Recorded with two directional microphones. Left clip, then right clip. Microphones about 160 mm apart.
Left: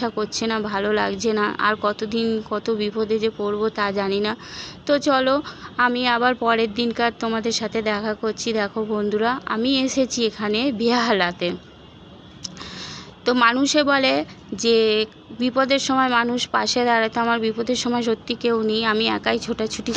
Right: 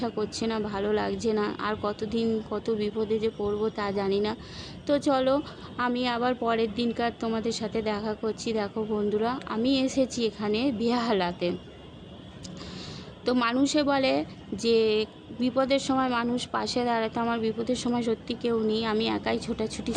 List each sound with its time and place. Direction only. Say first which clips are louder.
0.0 s speech: left 6 dB; 20° left (ahead or behind)
8.7 s speech: left 5 dB; 30° left (ahead or behind)
9.0 s speech: left 6 dB; 20° left (ahead or behind)
13.2 s speech: left 8 dB; 20° left (ahead or behind)